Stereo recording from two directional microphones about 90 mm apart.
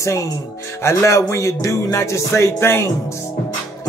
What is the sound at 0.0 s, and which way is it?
A man's voice, 35° left (ahead or behind).